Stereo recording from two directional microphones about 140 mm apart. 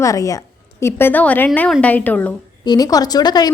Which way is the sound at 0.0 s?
25° left (ahead or behind).